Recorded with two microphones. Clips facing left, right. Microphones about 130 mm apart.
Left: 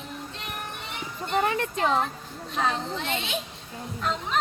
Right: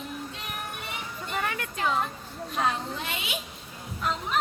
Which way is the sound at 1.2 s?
30° left (ahead or behind).